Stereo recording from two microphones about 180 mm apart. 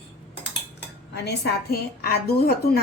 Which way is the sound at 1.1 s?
65° left (ahead or behind).